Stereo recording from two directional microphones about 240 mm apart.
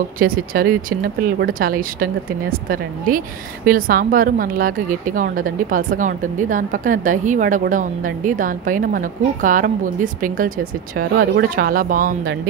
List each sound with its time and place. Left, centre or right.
0.2 s a woman's voice: right
3.6 s a woman's voice: right